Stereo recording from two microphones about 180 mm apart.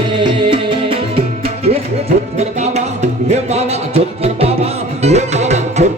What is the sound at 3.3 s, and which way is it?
Music, 35° right (ahead or behind).